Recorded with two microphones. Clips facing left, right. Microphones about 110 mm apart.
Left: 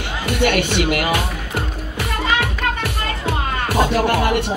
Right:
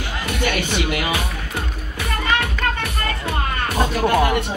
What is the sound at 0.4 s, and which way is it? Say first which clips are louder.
Speech: left 5 dB; 70° left (ahead or behind).